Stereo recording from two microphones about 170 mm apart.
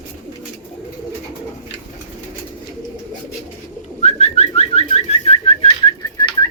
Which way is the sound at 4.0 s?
40° left (ahead or behind).